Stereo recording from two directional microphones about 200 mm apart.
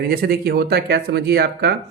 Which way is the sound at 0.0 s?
50° right (ahead or behind).